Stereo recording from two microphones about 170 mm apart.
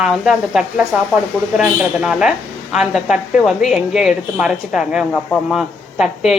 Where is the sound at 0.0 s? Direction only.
5° right (ahead or behind).